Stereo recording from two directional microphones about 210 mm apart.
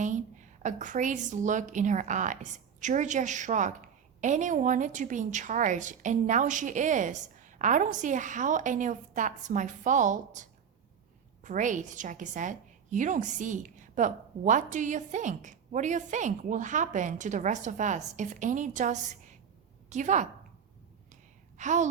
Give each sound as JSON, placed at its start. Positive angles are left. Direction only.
{"t": 0.0, "sound": "a woman's voice", "side_deg": -35}
{"t": 21.6, "sound": "a woman's voice", "side_deg": -35}